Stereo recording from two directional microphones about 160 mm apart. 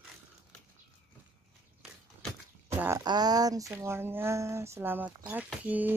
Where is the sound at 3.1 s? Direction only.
25° right (ahead or behind); by 5.9 s 10° right (ahead or behind).